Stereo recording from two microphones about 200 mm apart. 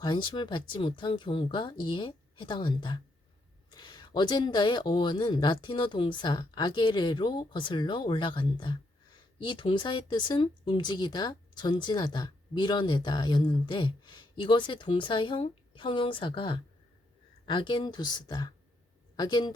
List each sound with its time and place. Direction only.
0.0 s speech: 20° left (ahead or behind)